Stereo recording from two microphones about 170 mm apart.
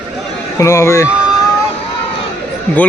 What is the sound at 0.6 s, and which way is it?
Speech, 15° left (ahead or behind).